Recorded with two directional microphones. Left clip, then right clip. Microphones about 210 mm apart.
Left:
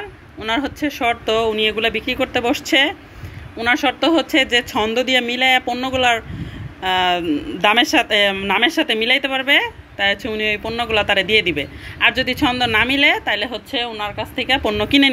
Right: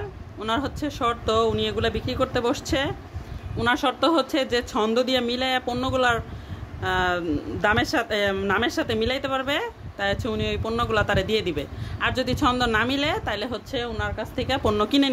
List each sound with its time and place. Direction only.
0.4 s speech: 5° right (ahead or behind)